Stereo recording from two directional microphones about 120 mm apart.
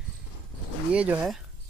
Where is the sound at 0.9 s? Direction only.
10° right (ahead or behind).